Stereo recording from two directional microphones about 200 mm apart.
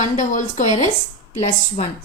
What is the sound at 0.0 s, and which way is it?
A woman's voice, 40° left (ahead or behind).